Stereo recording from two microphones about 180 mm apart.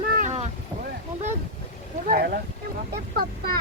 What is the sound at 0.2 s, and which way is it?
Boat, 40° right (ahead or behind).